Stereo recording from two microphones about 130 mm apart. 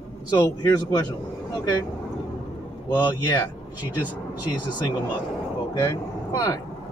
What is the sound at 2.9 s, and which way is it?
Speech, 35° left (ahead or behind).